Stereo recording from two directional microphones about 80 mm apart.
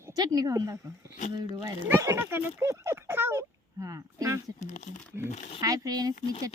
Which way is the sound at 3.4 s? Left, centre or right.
Right.